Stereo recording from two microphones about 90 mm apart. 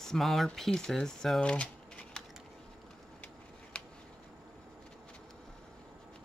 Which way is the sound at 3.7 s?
10° left (ahead or behind).